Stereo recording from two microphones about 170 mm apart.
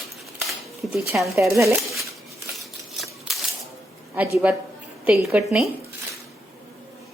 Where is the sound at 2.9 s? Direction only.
Centre (ahead or behind).